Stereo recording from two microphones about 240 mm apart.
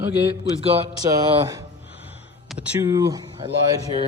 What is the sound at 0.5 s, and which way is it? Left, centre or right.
Speech, right.